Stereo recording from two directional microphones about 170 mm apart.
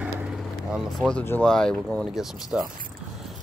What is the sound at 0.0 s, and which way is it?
Vehicle, 5° right (ahead or behind).